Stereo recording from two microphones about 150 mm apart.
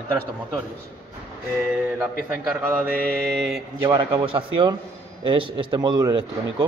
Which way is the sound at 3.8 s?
30° right (ahead or behind).